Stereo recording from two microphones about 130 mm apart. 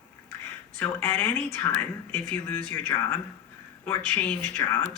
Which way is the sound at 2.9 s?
30° left (ahead or behind).